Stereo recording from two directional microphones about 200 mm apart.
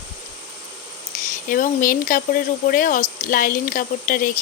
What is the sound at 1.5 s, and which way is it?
Speech, 45° left (ahead or behind).